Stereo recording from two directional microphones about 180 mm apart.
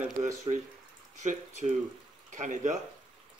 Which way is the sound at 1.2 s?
45° right (ahead or behind).